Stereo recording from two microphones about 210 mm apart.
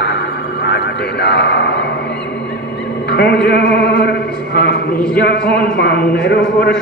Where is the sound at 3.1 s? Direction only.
50° left (ahead or behind).